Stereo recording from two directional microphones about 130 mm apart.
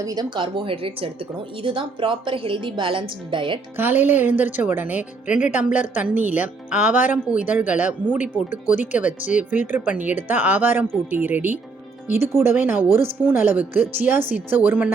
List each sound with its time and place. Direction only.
0.0 s a woman's voice: 30° right (ahead or behind)
3.8 s speech: 15° right (ahead or behind)